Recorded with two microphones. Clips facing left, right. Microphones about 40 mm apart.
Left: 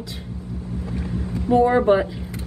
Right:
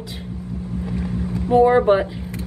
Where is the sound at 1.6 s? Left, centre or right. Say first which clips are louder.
Right 2 dB; centre.